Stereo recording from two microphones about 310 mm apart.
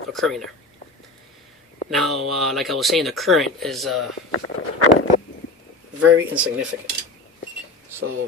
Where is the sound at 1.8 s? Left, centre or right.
Centre.